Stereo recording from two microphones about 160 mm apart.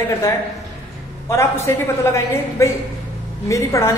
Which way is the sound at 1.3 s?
15° left (ahead or behind).